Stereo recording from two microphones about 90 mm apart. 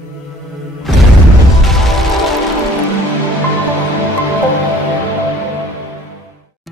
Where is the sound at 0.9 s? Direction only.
Centre (ahead or behind).